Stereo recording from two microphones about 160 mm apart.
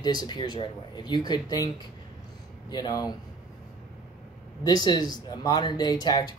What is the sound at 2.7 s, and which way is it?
Speech, 25° left (ahead or behind).